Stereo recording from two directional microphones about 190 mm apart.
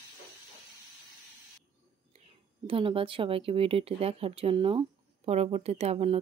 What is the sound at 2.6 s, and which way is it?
Speech, 30° right (ahead or behind).